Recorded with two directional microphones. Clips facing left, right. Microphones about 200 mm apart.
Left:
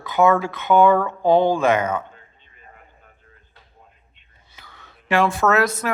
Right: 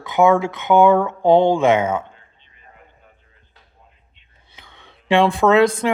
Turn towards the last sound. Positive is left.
turn(degrees=-30)  # may be behind; listen again after turning